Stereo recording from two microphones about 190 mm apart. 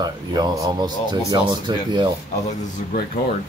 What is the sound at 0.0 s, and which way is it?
Speech, 20° right (ahead or behind).